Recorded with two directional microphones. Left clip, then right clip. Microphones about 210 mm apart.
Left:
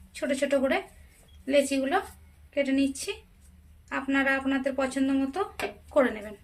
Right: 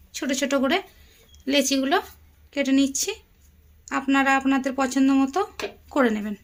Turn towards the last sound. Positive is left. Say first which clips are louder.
# right 2 dB
turn(degrees=-55)  # may be behind; listen again after turning